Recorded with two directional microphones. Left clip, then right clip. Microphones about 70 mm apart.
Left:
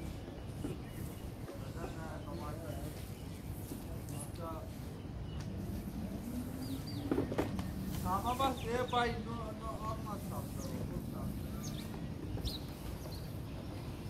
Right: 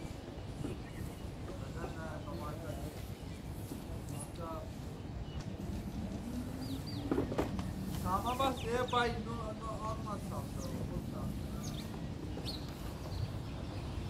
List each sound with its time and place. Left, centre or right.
7.1 s vehicle: centre
8.5 s chicken: left